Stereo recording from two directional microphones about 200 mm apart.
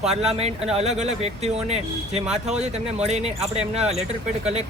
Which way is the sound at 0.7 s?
35° right (ahead or behind).